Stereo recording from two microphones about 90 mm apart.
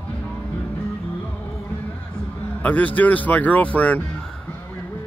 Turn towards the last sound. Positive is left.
turn(degrees=15)  # may be behind; listen again after turning